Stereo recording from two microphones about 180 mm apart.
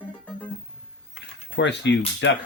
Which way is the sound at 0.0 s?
10° left (ahead or behind).